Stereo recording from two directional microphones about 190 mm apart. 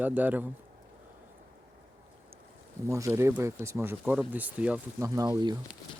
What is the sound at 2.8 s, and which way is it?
Speech, 15° right (ahead or behind).